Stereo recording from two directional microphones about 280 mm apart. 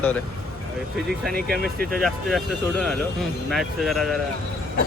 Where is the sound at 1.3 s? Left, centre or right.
Right.